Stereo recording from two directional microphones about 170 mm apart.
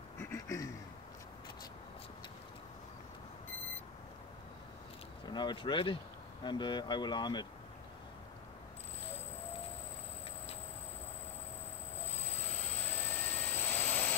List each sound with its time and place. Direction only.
0.2 s a sound: 15° left (ahead or behind)
5.2 s speech: 25° left (ahead or behind)
13.2 s jet engine: 10° left (ahead or behind)